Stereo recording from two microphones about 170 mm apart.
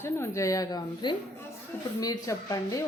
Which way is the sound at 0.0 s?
15° left (ahead or behind).